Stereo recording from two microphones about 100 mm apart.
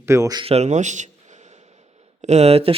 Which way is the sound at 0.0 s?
30° right (ahead or behind).